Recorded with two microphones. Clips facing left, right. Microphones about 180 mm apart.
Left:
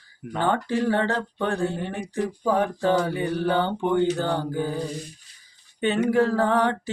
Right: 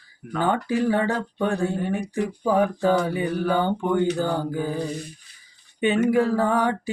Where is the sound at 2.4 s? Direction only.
10° right (ahead or behind).